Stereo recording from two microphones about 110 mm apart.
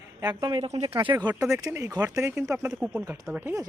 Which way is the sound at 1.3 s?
25° right (ahead or behind).